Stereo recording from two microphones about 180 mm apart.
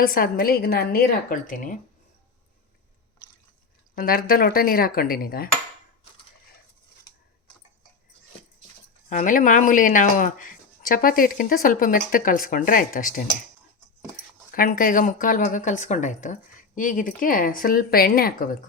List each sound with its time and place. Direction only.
0.0 s speech: 55° left (ahead or behind)
3.9 s speech: 55° left (ahead or behind)
9.0 s speech: 45° left (ahead or behind)
14.5 s speech: 50° left (ahead or behind)